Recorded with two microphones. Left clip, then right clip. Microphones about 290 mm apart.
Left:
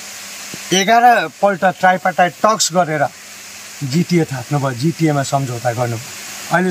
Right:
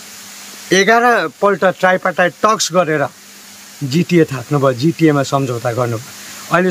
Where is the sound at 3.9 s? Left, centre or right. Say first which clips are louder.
Right 4 dB; centre.